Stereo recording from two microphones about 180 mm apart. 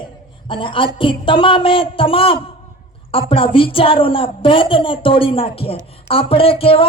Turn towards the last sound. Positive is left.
turn(degrees=30)  # may be behind; listen again after turning